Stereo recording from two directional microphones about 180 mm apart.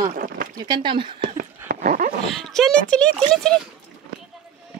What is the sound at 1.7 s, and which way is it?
Dog, 50° right (ahead or behind).